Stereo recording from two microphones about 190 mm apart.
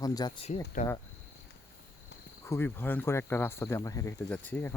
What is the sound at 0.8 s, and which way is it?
Speech, 45° left (ahead or behind).